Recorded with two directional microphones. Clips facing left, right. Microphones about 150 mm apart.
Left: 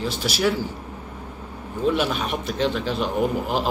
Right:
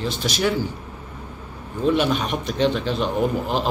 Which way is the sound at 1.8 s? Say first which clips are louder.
Right 2 dB; 5° left (ahead or behind).